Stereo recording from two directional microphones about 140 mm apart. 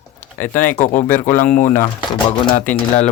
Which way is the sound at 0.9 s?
15° left (ahead or behind).